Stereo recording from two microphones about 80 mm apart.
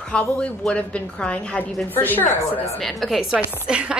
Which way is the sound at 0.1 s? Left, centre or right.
Centre.